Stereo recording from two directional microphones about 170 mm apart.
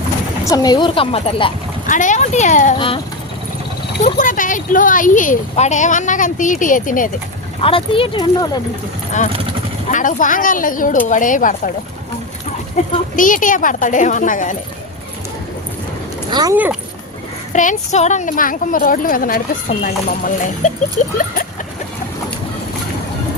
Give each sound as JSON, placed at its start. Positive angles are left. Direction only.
{"t": 0.4, "sound": "a woman's voice", "side_deg": 20}
{"t": 1.9, "sound": "speech", "side_deg": 50}
{"t": 2.7, "sound": "speech", "side_deg": 30}
{"t": 4.0, "sound": "speech", "side_deg": 50}
{"t": 7.6, "sound": "speech", "side_deg": 30}
{"t": 9.9, "sound": "speech", "side_deg": 50}
{"t": 13.1, "sound": "speech", "side_deg": 50}
{"t": 16.3, "sound": "speech", "side_deg": -20}
{"t": 17.5, "sound": "speech", "side_deg": 45}